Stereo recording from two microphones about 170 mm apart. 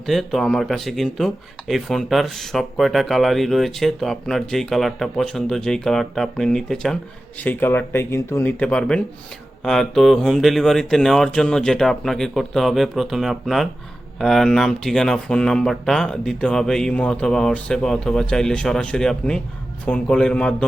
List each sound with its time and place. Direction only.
0.0 s speech: centre (ahead or behind)